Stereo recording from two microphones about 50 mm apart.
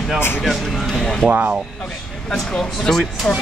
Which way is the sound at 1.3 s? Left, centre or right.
Right.